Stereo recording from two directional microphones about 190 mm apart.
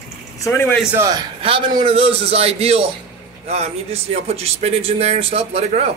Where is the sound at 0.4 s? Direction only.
10° left (ahead or behind).